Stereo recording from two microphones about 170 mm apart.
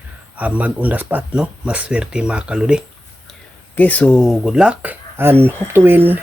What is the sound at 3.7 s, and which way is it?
Speech, 10° left (ahead or behind).